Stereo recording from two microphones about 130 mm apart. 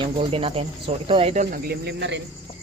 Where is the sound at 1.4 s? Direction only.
90° right.